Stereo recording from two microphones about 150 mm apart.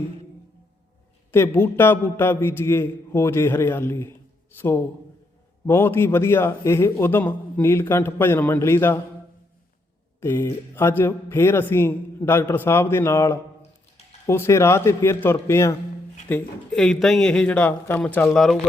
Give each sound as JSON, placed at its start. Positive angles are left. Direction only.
{"t": 1.3, "sound": "a man's voice", "side_deg": 15}
{"t": 10.2, "sound": "a man's voice", "side_deg": 15}
{"t": 16.3, "sound": "speech", "side_deg": 5}